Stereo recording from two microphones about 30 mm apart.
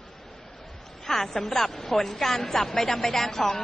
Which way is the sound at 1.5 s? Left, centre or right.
Centre.